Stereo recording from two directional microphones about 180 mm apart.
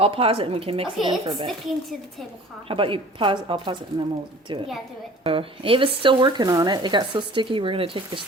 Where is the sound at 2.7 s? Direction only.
30° right (ahead or behind).